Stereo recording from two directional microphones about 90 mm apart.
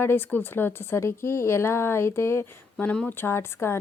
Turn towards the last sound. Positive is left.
turn(degrees=30)  # may be behind; listen again after turning